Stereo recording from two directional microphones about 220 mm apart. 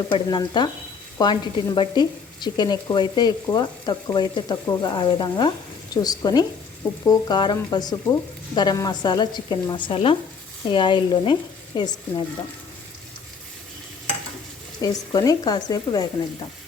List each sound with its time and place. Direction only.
0.1 s speech: 20° left (ahead or behind)
14.8 s speech: 15° left (ahead or behind)